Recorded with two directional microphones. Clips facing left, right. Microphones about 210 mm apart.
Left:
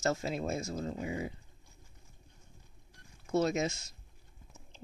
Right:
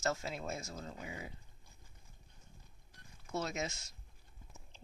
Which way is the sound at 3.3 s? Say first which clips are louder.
Left 9 dB; 30° left (ahead or behind).